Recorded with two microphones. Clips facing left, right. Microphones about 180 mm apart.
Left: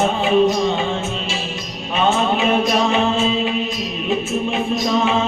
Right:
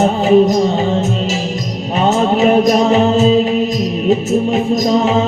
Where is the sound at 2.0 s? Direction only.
40° right (ahead or behind).